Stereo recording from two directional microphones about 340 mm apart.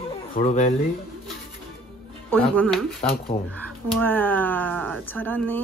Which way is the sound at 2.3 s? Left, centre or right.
Centre.